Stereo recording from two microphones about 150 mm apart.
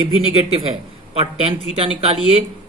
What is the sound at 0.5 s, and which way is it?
Speech, 40° right (ahead or behind).